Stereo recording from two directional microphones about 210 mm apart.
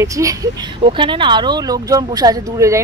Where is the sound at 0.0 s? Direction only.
15° right (ahead or behind).